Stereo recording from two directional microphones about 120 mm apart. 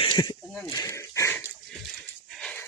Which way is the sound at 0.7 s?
25° left (ahead or behind).